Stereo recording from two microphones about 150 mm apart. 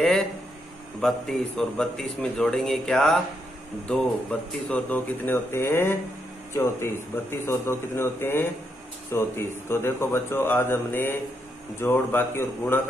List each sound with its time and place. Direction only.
1.0 s a man's voice: 5° left (ahead or behind)